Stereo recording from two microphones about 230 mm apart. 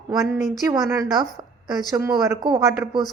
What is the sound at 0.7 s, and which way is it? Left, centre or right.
A woman's voice, centre.